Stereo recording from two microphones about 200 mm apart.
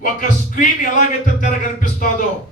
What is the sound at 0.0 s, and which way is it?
Speech, 40° left (ahead or behind).